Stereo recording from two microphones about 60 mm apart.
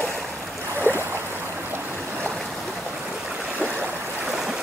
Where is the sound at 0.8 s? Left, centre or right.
Left.